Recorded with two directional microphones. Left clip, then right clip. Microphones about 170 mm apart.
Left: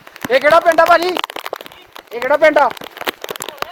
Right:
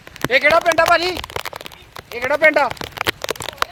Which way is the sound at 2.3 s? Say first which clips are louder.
Left 3 dB; 50° right (ahead or behind).